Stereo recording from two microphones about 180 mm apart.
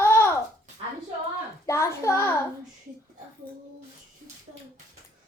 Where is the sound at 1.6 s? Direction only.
15° left (ahead or behind).